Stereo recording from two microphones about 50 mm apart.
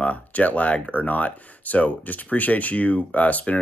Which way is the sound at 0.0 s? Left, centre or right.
Left.